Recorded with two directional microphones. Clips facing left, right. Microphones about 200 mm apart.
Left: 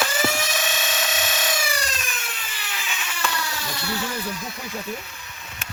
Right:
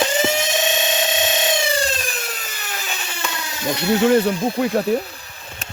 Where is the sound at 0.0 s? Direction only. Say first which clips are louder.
Right 5 dB; 20° right (ahead or behind).